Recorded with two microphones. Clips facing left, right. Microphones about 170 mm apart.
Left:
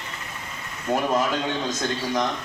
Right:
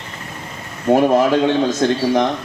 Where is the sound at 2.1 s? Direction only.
55° right (ahead or behind).